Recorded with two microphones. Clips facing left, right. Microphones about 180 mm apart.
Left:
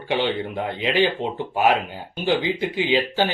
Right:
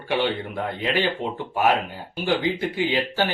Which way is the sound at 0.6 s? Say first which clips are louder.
Left 4 dB; 20° left (ahead or behind).